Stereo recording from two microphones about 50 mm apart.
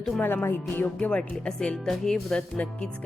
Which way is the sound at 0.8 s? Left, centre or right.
Left.